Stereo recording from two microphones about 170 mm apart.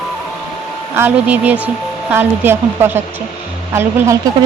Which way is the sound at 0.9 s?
10° right (ahead or behind).